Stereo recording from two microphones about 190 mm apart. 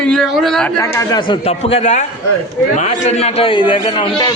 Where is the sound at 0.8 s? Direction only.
15° left (ahead or behind).